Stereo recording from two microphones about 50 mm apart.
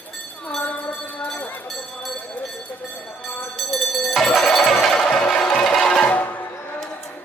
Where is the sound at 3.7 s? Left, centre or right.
Centre.